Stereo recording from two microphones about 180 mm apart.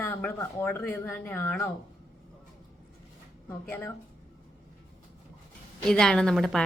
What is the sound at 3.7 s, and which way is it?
Speech, 10° left (ahead or behind).